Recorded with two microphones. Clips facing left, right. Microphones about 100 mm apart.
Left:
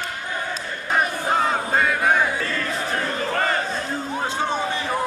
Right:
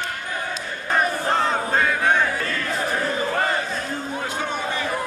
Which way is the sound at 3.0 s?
10° right (ahead or behind).